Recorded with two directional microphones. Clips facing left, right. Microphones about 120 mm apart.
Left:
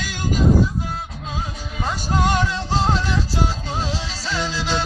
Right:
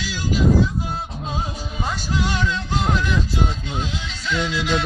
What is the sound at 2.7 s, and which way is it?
Music, 30° left (ahead or behind).